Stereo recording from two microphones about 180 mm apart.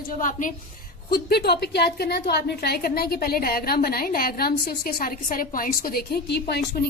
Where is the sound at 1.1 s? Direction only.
60° left (ahead or behind).